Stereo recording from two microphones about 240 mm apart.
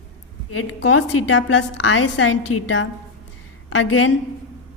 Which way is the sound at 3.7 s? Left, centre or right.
Left.